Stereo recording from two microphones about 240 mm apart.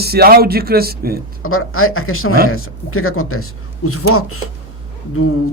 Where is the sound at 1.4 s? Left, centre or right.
Left.